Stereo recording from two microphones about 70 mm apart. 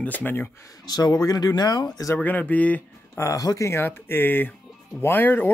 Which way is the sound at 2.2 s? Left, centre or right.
Left.